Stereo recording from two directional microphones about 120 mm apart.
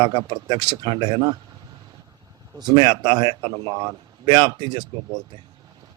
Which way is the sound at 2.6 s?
35° right (ahead or behind).